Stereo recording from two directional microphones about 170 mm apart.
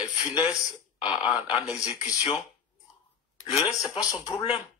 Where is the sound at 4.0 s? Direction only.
20° left (ahead or behind).